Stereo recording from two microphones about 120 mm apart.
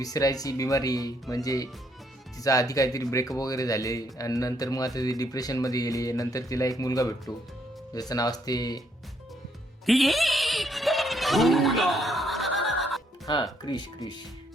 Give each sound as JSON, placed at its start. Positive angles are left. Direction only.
{"t": 0.0, "sound": "speech", "side_deg": 30}
{"t": 9.8, "sound": "a sound", "side_deg": 0}
{"t": 13.2, "sound": "speech", "side_deg": 35}